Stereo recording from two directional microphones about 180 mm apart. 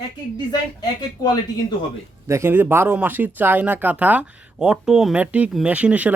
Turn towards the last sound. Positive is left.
turn(degrees=-10)  # may be behind; listen again after turning